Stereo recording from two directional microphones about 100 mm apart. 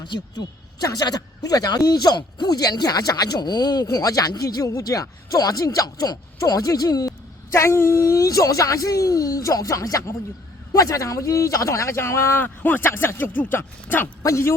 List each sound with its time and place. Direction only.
0.0 s speech: 45° left (ahead or behind)
7.5 s speech: 25° left (ahead or behind)